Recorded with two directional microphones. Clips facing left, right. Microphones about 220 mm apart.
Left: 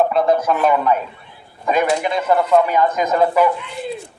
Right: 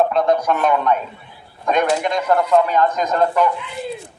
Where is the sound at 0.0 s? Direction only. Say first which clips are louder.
Left 1 dB; 5° left (ahead or behind).